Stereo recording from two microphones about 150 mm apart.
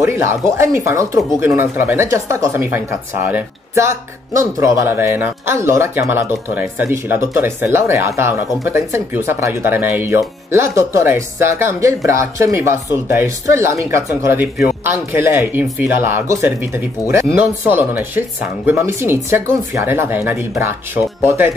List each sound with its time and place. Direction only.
0.0 s speech: 20° right (ahead or behind)